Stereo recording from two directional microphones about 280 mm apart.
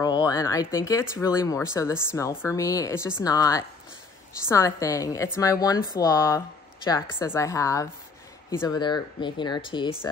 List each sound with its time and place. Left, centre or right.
0.0 s a woman's voice: centre